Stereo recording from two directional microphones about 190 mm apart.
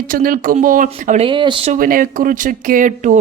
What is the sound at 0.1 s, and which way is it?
Speech, 45° right (ahead or behind).